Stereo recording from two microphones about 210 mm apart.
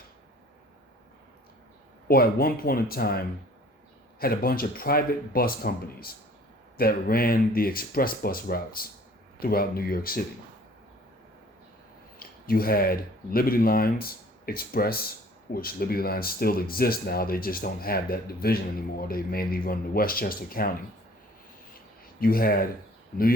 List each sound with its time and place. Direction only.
2.0 s speech: 45° left (ahead or behind)
4.2 s speech: 45° left (ahead or behind)
12.5 s speech: 45° left (ahead or behind)
22.2 s speech: 45° left (ahead or behind)